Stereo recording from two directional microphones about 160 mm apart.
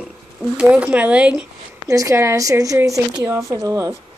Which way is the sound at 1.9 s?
20° right (ahead or behind).